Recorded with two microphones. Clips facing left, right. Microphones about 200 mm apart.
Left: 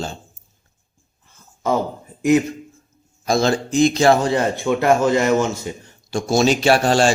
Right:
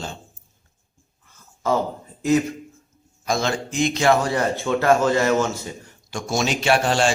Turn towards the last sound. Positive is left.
turn(degrees=40)  # may be behind; listen again after turning